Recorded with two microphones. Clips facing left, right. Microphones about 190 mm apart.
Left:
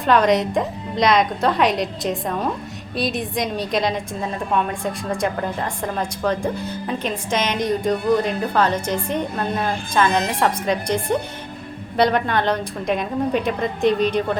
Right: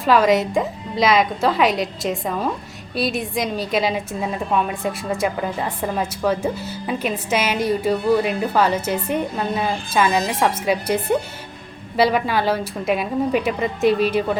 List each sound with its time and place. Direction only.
0.0 s a woman's voice: 5° right (ahead or behind)